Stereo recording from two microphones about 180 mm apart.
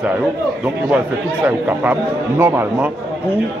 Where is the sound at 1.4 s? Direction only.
10° right (ahead or behind).